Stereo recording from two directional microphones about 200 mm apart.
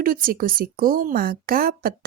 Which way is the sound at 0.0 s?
45° right (ahead or behind).